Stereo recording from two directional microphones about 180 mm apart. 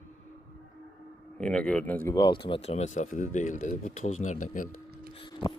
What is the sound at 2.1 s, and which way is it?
Speech, 25° left (ahead or behind).